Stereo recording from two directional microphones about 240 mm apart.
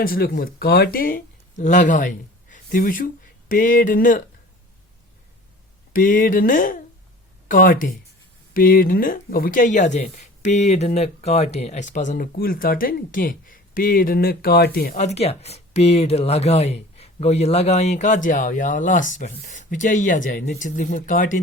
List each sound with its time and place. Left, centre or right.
0.0 s speech: left
5.9 s speech: left